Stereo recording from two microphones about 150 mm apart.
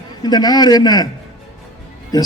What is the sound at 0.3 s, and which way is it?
Speech, 25° left (ahead or behind).